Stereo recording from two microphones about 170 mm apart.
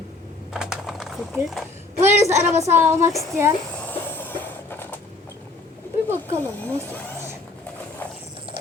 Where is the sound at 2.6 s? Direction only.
15° right (ahead or behind).